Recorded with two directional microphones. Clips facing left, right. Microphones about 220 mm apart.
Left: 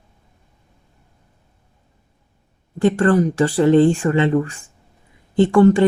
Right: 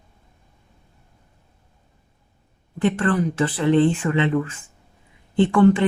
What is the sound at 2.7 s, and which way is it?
A woman's voice, 40° left (ahead or behind).